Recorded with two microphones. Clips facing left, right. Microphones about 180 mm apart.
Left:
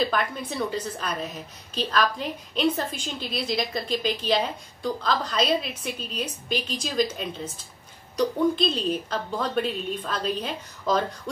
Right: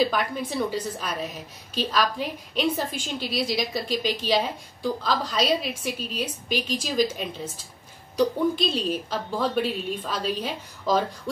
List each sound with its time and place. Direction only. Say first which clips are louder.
0.0 s a woman's voice: right 2 dB; 5° right (ahead or behind)